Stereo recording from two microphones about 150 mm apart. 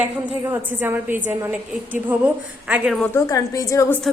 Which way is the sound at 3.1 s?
20° left (ahead or behind).